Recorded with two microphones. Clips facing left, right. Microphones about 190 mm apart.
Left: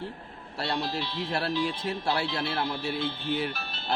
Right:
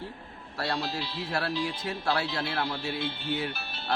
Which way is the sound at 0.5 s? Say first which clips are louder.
Left 1 dB; 25° left (ahead or behind).